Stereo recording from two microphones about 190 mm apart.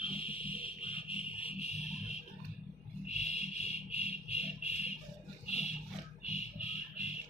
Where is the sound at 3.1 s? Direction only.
35° left (ahead or behind).